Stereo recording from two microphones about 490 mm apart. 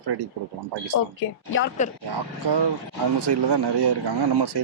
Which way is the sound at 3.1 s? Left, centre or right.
Right.